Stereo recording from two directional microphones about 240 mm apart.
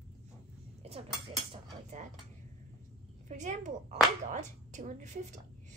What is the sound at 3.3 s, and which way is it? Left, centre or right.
A woman's voice, right.